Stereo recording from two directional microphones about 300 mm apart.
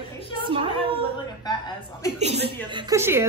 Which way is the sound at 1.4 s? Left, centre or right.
Centre.